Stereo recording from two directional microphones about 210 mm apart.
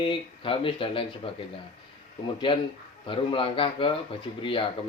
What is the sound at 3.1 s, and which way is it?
Speech, 25° left (ahead or behind).